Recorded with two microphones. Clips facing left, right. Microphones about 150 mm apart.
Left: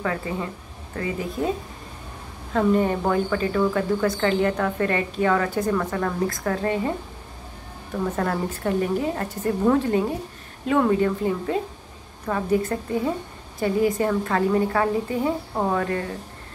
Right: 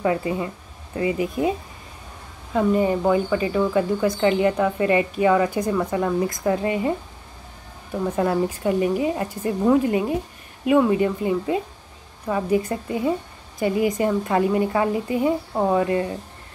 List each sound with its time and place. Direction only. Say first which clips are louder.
0.0 s speech: right 5 dB; 20° right (ahead or behind)
2.5 s speech: right 1 dB; 10° right (ahead or behind)
8.2 s speech: right 7 dB; 10° right (ahead or behind)